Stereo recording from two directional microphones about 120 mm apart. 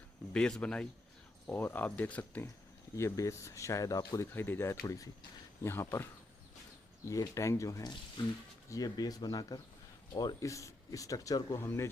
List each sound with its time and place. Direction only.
0.3 s speech: 5° left (ahead or behind)
2.9 s speech: 25° left (ahead or behind)
4.4 s speech: 20° left (ahead or behind)
7.1 s speech: 25° left (ahead or behind)